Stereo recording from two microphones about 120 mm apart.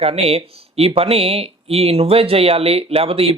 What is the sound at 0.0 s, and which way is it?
Speech, 55° right (ahead or behind).